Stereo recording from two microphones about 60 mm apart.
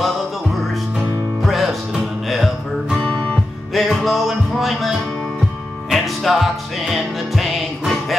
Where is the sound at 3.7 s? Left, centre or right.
Centre.